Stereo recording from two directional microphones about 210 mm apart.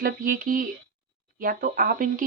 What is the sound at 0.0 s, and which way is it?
Speech, 40° right (ahead or behind).